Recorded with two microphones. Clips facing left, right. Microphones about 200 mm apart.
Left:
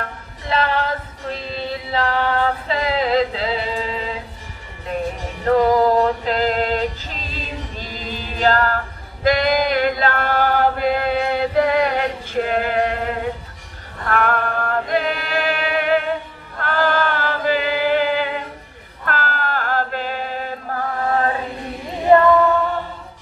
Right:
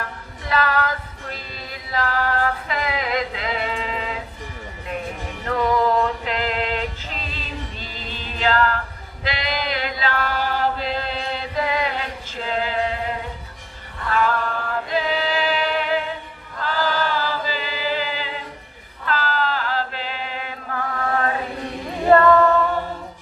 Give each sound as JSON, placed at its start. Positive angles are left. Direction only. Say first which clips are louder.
{"t": 0.5, "sound": "female singing", "louder": "left 2 dB", "side_deg": 30}
{"t": 5.4, "sound": "music", "louder": "left 6 dB", "side_deg": 35}
{"t": 8.1, "sound": "choir", "louder": "left 4 dB", "side_deg": 40}
{"t": 14.0, "sound": "chant", "louder": "left 2 dB", "side_deg": 60}
{"t": 22.1, "sound": "a capella", "louder": "left 2 dB", "side_deg": 20}